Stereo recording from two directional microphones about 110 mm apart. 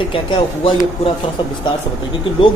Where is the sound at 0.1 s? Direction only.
50° left (ahead or behind).